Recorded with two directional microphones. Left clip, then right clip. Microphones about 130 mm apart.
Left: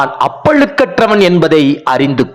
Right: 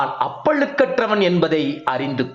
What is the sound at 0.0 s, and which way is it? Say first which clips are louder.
A man's voice: left 8 dB; 50° left (ahead or behind).